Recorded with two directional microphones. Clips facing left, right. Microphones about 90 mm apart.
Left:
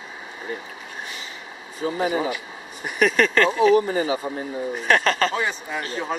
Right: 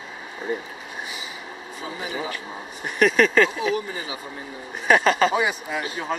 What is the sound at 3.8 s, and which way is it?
Speech, 40° left (ahead or behind).